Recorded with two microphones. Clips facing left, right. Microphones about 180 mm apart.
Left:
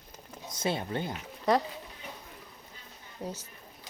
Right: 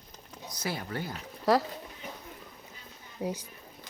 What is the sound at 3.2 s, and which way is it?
Speech, 10° right (ahead or behind).